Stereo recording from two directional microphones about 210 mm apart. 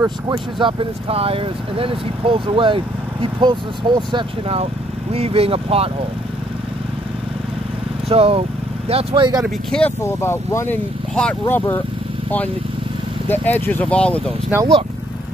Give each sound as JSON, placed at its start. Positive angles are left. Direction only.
{"t": 0.6, "sound": "speech", "side_deg": -25}
{"t": 8.1, "sound": "speech", "side_deg": -25}
{"t": 9.4, "sound": "speech", "side_deg": 5}
{"t": 13.3, "sound": "speech", "side_deg": 10}
{"t": 14.5, "sound": "speech", "side_deg": -10}